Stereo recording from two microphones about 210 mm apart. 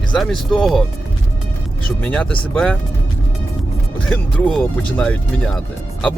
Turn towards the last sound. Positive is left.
turn(degrees=5)  # may be behind; listen again after turning